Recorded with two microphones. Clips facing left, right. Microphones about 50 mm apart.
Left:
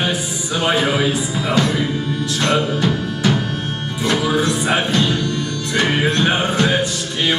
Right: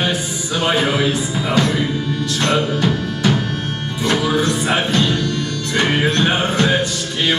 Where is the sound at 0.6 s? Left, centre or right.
Centre.